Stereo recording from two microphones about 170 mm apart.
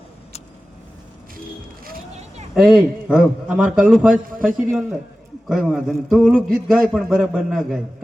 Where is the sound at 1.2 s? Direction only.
60° right (ahead or behind).